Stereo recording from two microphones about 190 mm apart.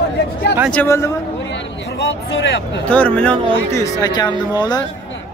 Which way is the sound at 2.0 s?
70° left (ahead or behind).